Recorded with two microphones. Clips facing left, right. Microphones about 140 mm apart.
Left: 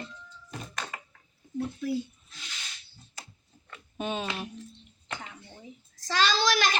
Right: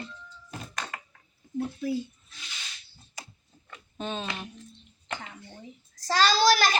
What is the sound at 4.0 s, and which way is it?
Speech, 10° left (ahead or behind).